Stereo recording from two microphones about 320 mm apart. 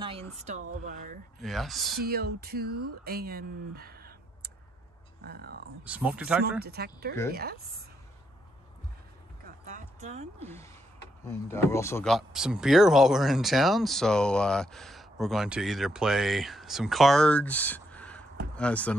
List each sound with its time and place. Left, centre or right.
0.8 s speech: right
1.4 s speech: centre
2.0 s speech: right
5.9 s speech: centre
6.6 s speech: right
9.7 s a sound: right
11.2 s speech: centre